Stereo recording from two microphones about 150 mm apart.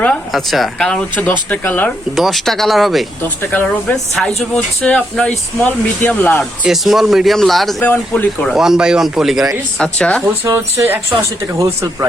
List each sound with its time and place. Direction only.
0.0 s speech: 5° left (ahead or behind)
2.1 s speech: centre (ahead or behind)
3.5 s speech: 10° left (ahead or behind)
6.7 s speech: centre (ahead or behind)
8.5 s speech: 5° right (ahead or behind)
10.4 s speech: 20° right (ahead or behind)